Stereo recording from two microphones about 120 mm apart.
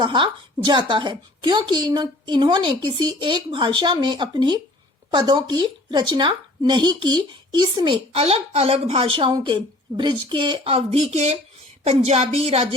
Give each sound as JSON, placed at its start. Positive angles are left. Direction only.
{"t": 0.0, "sound": "a woman's voice", "side_deg": -40}
{"t": 8.2, "sound": "speech", "side_deg": -55}
{"t": 10.6, "sound": "speech", "side_deg": -55}